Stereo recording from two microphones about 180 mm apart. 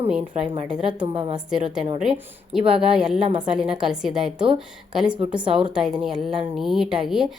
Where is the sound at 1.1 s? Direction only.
30° right (ahead or behind).